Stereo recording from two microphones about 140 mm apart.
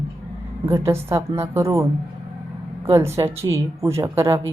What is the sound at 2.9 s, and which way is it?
A woman's voice, 20° right (ahead or behind).